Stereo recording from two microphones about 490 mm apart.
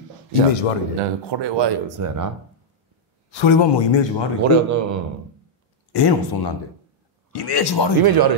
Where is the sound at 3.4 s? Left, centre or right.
Left.